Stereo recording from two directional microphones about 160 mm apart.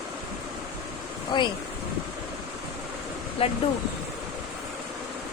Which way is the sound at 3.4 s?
35° left (ahead or behind).